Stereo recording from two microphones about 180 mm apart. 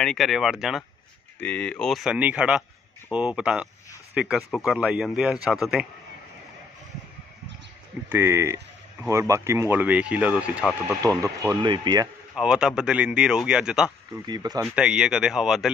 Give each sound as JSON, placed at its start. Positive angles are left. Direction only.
{"t": 0.0, "sound": "speech", "side_deg": 0}
{"t": 8.1, "sound": "speech", "side_deg": -15}
{"t": 12.4, "sound": "speech", "side_deg": -5}
{"t": 14.1, "sound": "speech", "side_deg": -20}
{"t": 14.6, "sound": "speech", "side_deg": -5}